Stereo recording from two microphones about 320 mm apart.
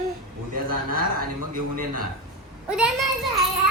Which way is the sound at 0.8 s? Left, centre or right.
Right.